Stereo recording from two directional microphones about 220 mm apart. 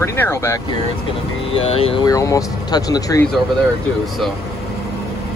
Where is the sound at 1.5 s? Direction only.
25° left (ahead or behind).